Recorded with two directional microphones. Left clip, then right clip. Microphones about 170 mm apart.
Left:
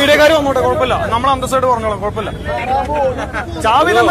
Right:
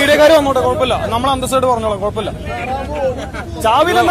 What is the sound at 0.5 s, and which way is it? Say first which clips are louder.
Speech: even; 20° right (ahead or behind).